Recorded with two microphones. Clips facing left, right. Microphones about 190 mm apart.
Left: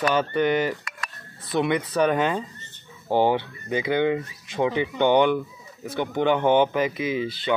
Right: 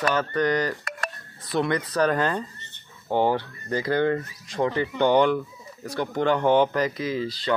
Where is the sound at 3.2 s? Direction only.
25° left (ahead or behind).